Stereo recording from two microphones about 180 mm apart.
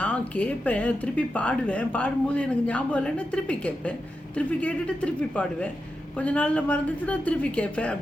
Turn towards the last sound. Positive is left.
turn(degrees=5)  # may be behind; listen again after turning